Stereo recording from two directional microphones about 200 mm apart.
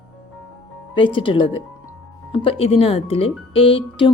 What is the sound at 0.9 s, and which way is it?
Speech, 25° left (ahead or behind).